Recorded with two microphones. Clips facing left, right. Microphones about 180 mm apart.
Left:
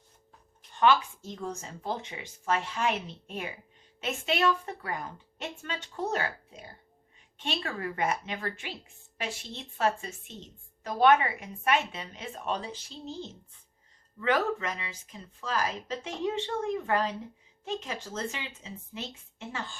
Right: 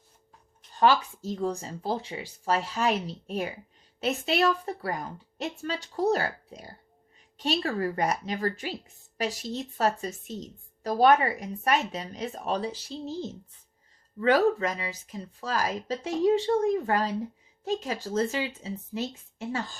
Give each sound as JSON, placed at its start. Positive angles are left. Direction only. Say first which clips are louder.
{"t": 0.8, "sound": "a woman's voice", "louder": "right 1 dB", "side_deg": -35}
{"t": 14.2, "sound": "a woman's voice", "louder": "right 6 dB", "side_deg": -35}